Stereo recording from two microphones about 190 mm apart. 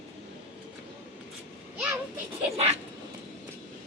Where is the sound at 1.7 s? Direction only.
5° right (ahead or behind).